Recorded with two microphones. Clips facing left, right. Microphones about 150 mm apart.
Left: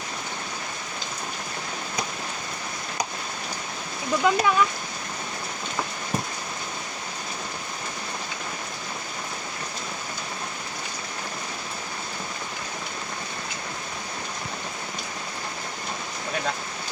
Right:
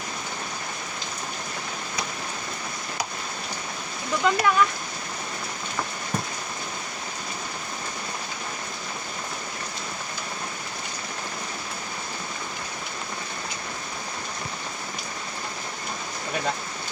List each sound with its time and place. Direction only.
4.2 s speech: 15° left (ahead or behind)